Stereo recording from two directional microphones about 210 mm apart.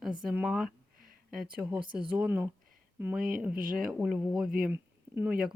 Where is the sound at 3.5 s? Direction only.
45° right (ahead or behind).